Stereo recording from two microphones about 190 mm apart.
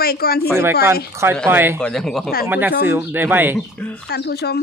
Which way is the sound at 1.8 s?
Centre (ahead or behind).